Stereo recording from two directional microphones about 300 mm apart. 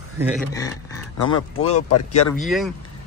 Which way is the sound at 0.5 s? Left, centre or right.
Centre.